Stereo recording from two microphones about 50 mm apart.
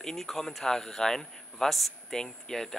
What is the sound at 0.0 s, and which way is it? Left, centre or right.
Speech, centre.